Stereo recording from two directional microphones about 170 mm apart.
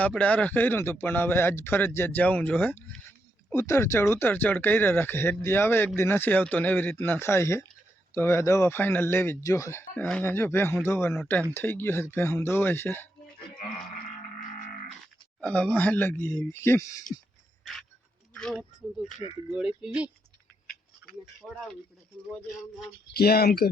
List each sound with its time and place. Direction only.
0.0 s speech: 10° left (ahead or behind)
15.4 s speech: 5° left (ahead or behind)
18.3 s speech: 5° left (ahead or behind)
21.5 s speech: 5° left (ahead or behind)
23.1 s speech: 65° left (ahead or behind)